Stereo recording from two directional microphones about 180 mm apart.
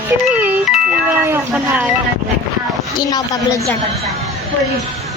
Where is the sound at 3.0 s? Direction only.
20° left (ahead or behind).